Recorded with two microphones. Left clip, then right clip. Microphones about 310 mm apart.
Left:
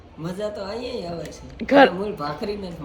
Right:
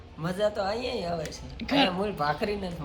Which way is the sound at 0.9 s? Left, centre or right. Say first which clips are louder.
Left 1 dB; centre.